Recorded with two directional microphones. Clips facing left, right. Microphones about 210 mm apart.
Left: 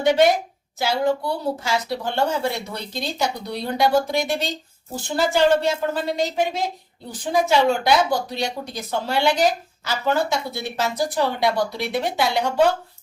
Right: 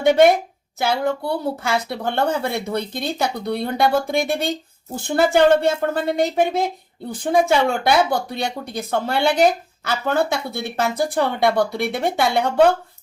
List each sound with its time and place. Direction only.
0.0 s a woman's voice: 55° right (ahead or behind)